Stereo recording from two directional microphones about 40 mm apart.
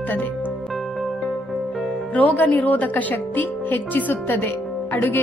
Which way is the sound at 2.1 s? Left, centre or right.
Left.